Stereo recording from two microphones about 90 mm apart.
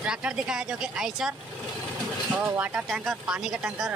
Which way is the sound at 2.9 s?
5° right (ahead or behind).